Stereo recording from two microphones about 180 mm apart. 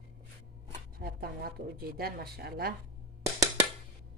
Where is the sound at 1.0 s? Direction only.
55° right (ahead or behind).